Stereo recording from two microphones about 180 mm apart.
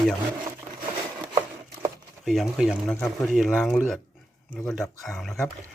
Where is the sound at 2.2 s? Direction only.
Centre (ahead or behind).